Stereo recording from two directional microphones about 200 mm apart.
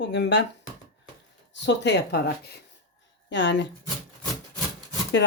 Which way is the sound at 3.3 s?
65° left (ahead or behind).